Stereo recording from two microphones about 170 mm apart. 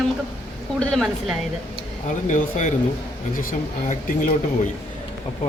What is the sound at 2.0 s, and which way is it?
Speech, 45° left (ahead or behind).